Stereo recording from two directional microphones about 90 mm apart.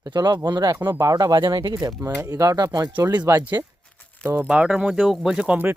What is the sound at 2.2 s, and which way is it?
Speech, 35° right (ahead or behind).